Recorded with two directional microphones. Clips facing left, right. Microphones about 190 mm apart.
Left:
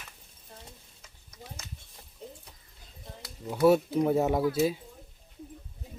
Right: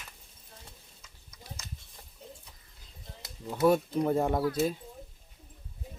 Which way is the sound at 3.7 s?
5° left (ahead or behind).